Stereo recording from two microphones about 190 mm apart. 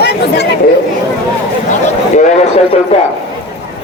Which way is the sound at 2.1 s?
35° left (ahead or behind).